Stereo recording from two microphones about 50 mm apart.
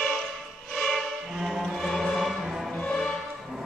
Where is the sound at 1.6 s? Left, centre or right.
Centre.